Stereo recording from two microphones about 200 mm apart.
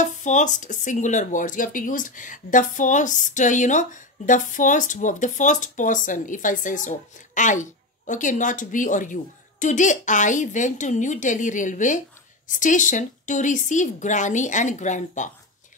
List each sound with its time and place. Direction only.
0.0 s speech: 35° left (ahead or behind)